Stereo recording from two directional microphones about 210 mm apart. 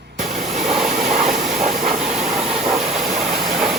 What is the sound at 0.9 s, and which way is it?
Vehicle, 35° right (ahead or behind).